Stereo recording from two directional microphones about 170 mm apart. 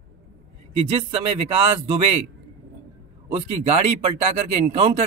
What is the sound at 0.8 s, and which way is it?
Speech, 35° right (ahead or behind).